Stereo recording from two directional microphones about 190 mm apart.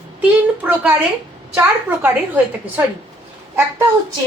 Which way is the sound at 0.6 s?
5° right (ahead or behind).